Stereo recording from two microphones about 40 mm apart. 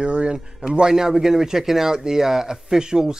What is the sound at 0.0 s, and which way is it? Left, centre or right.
Speech, right.